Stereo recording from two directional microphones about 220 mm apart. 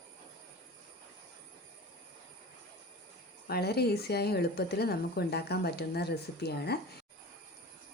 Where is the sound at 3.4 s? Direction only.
45° left (ahead or behind).